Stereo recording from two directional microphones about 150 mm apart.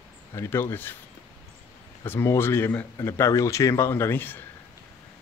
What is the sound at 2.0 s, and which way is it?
Speech, 15° left (ahead or behind).